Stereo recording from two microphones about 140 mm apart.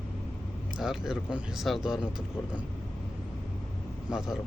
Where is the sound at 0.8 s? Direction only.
5° right (ahead or behind).